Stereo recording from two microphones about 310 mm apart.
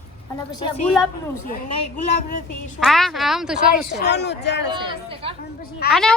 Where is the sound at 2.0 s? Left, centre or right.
Left.